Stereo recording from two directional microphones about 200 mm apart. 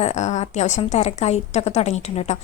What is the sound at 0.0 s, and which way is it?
A woman's voice, 35° left (ahead or behind).